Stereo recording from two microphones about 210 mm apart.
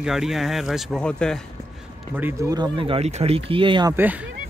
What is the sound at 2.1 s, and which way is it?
Speech, 10° right (ahead or behind).